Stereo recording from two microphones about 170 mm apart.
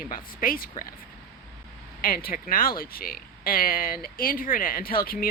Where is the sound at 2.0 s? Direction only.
60° left (ahead or behind).